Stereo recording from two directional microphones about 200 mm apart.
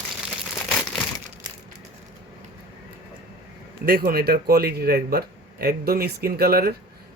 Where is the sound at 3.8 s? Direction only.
50° right (ahead or behind).